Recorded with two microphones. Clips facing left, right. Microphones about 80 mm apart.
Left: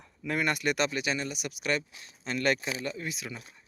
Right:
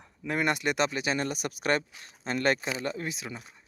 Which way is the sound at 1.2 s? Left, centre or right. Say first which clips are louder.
Right 4 dB; right.